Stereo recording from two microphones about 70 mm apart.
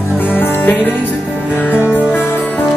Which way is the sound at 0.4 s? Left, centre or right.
Left.